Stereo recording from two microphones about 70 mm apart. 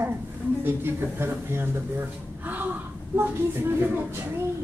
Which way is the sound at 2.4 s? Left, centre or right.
Right.